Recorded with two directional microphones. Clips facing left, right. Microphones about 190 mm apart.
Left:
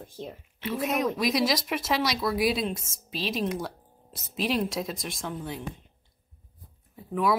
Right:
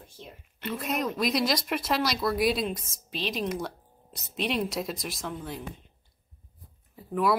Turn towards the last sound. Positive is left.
turn(degrees=0)  # may be behind; listen again after turning